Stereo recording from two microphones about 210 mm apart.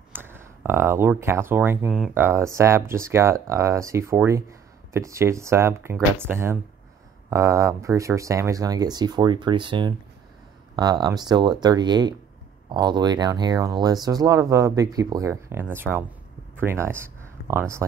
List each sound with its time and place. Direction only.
0.1 s speech: 10° right (ahead or behind)